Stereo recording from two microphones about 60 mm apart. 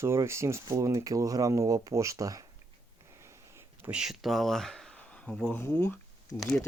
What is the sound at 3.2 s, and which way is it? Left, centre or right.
Sniff, right.